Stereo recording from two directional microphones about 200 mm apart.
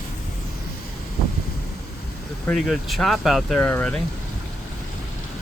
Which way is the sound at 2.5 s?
Centre (ahead or behind).